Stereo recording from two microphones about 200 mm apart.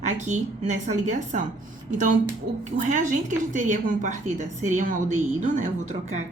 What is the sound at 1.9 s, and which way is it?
A woman's voice, 40° right (ahead or behind).